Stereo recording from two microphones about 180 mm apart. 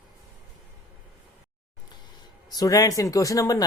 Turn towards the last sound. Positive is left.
turn(degrees=20)  # may be behind; listen again after turning